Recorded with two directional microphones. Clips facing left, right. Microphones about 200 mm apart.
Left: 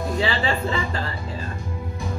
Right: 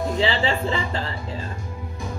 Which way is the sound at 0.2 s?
25° right (ahead or behind).